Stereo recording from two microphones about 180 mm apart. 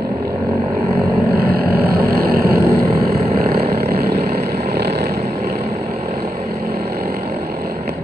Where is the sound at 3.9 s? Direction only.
60° right (ahead or behind).